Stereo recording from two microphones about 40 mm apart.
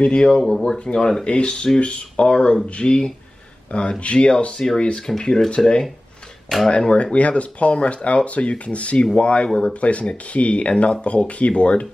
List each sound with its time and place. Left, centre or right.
0.0 s speech: left
6.7 s speech: left
9.5 s speech: centre
9.8 s speech: left